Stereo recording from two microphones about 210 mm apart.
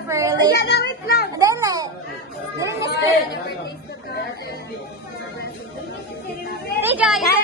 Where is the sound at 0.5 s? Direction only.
50° left (ahead or behind).